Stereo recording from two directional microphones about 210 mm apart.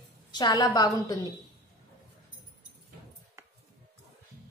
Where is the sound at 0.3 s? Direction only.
20° left (ahead or behind).